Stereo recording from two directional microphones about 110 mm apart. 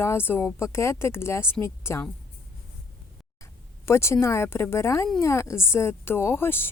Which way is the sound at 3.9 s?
25° left (ahead or behind).